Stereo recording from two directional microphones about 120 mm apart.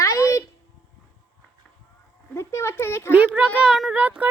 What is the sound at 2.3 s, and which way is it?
Speech, 25° left (ahead or behind).